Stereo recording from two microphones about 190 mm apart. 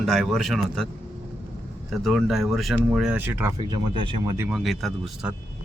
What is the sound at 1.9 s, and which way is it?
Speech, centre (ahead or behind).